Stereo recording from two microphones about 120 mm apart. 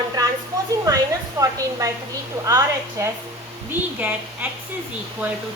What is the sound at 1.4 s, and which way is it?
A woman's voice, 30° right (ahead or behind).